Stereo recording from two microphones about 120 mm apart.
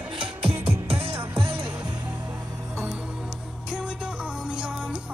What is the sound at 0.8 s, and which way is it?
Music, 55° right (ahead or behind).